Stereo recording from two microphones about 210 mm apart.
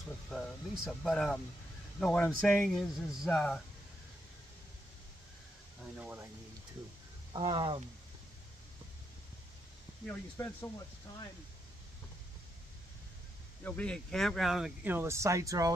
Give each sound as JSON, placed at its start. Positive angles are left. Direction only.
{"t": 0.3, "sound": "speech", "side_deg": 0}
{"t": 5.9, "sound": "speech", "side_deg": -10}
{"t": 7.3, "sound": "speech", "side_deg": -25}
{"t": 10.0, "sound": "speech", "side_deg": 10}
{"t": 13.7, "sound": "speech", "side_deg": 5}